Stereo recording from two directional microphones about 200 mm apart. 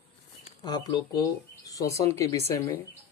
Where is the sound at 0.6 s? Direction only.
20° left (ahead or behind).